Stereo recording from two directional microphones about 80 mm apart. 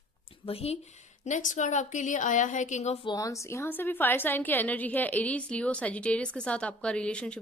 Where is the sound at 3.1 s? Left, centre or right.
Left.